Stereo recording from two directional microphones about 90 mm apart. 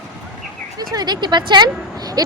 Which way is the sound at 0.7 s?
45° right (ahead or behind).